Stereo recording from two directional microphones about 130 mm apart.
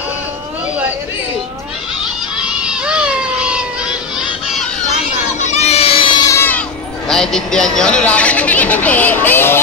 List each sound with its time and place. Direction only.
2.3 s cat: 10° right (ahead or behind)
5.4 s baby cry: 55° left (ahead or behind); by 6.2 s 40° left (ahead or behind)
6.2 s crowd: 20° left (ahead or behind)
7.1 s speech: 5° left (ahead or behind)